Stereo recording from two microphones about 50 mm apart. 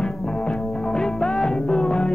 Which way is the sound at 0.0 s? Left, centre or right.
Centre.